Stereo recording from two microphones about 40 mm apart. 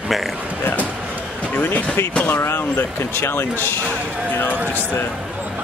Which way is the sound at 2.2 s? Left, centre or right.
Left.